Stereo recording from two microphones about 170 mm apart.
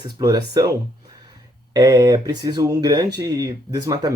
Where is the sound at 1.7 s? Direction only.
20° right (ahead or behind).